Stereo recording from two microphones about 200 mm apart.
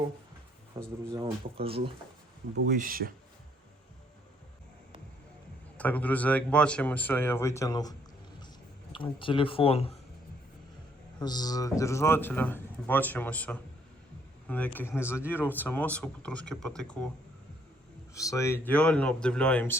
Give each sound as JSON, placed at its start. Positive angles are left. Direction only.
{"t": 0.8, "sound": "speech", "side_deg": -15}
{"t": 1.5, "sound": "speech", "side_deg": -30}
{"t": 2.6, "sound": "speech", "side_deg": -45}
{"t": 5.7, "sound": "a man's voice", "side_deg": 5}
{"t": 11.2, "sound": "a man's voice", "side_deg": 20}
{"t": 18.1, "sound": "a man's voice", "side_deg": 15}